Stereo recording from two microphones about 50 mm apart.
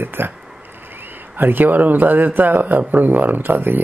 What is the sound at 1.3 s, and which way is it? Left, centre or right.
A man's voice, right.